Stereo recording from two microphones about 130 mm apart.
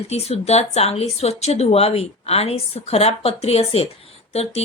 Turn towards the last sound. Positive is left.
turn(degrees=50)  # may be behind; listen again after turning